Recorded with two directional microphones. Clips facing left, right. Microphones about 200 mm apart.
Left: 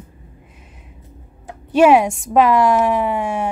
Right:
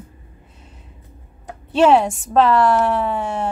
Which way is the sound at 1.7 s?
10° left (ahead or behind).